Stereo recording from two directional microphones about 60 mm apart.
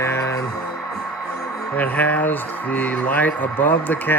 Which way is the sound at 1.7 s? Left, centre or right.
Left.